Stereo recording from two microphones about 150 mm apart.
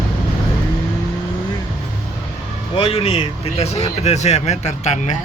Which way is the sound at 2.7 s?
40° left (ahead or behind).